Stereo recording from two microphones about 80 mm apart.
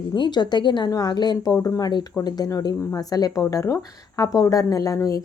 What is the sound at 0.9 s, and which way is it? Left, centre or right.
Speech, left.